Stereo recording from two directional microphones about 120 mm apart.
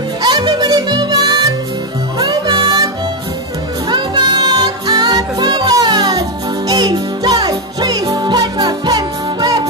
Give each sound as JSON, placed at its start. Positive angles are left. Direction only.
{"t": 0.2, "sound": "music", "side_deg": -40}
{"t": 3.9, "sound": "music", "side_deg": -40}